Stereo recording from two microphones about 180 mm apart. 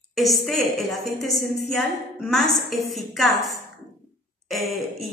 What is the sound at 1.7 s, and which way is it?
A woman's voice, centre (ahead or behind).